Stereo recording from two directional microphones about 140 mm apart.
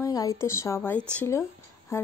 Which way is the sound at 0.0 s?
25° left (ahead or behind).